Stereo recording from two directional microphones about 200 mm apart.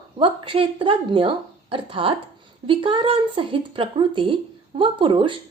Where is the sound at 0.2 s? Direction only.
25° right (ahead or behind).